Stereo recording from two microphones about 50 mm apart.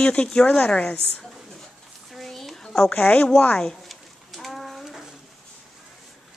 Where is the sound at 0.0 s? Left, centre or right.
Centre.